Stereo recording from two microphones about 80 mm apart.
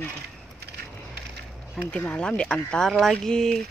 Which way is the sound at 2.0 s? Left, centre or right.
Centre.